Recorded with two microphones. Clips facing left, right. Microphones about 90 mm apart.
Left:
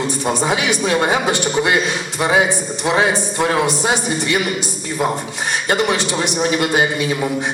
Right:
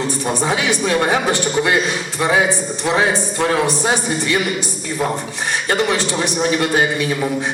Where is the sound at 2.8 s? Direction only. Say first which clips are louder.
Left 1 dB; 20° left (ahead or behind).